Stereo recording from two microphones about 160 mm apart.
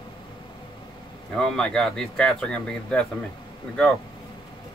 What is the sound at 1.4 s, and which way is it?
Speech, 5° left (ahead or behind).